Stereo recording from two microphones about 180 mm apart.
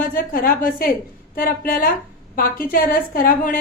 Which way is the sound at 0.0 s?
50° left (ahead or behind).